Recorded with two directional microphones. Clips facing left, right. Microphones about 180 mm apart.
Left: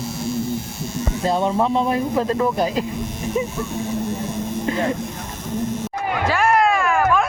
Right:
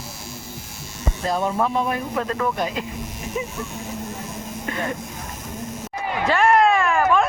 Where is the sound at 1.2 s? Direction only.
25° left (ahead or behind).